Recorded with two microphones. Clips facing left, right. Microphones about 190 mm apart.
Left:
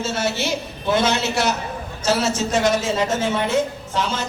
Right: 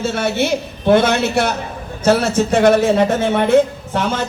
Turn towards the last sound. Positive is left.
turn(degrees=-55)  # may be behind; listen again after turning